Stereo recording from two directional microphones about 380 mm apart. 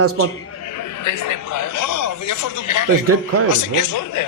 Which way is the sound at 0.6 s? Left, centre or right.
Left.